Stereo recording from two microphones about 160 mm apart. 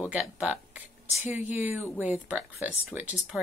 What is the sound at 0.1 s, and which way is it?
Speech, 10° right (ahead or behind).